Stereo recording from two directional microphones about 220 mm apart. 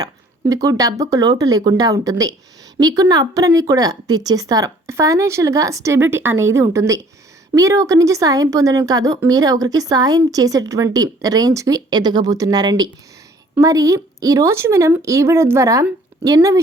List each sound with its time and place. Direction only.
0.0 s a woman's voice: 15° right (ahead or behind)